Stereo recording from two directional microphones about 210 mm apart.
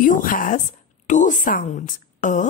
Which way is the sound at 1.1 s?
35° left (ahead or behind).